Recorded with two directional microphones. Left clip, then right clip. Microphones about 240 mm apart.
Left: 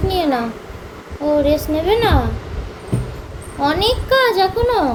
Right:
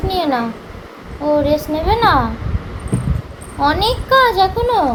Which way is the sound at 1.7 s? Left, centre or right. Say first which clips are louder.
Even; centre.